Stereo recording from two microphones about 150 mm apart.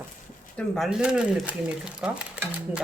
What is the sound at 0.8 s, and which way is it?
Speech, 5° right (ahead or behind).